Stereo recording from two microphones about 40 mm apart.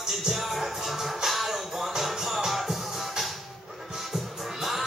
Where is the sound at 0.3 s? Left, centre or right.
Centre.